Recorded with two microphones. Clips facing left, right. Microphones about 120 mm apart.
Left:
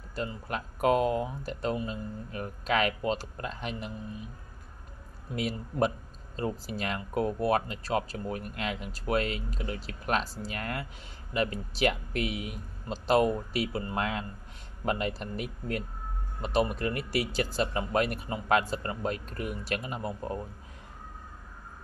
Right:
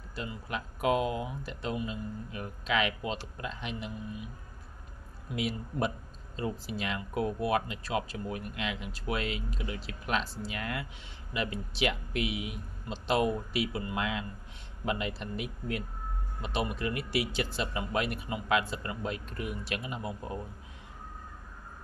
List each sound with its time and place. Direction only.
0.1 s speech: 45° left (ahead or behind)
5.3 s speech: 40° left (ahead or behind)